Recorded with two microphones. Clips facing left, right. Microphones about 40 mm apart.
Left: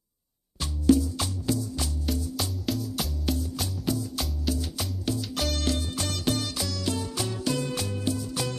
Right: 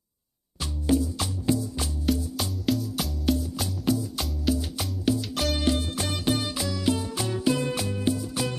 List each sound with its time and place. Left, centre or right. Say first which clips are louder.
0.8 s music: left 3 dB; right
2.0 s music: right 6 dB; centre